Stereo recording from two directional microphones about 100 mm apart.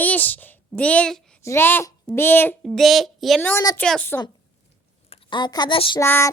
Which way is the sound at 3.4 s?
20° left (ahead or behind).